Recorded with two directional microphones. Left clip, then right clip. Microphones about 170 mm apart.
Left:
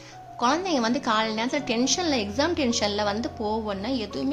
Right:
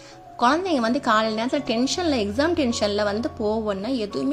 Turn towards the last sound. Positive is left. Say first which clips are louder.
# right 3 dB
turn(degrees=-20)  # may be behind; listen again after turning